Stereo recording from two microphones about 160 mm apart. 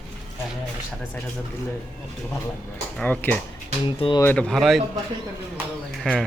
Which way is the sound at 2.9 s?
10° left (ahead or behind).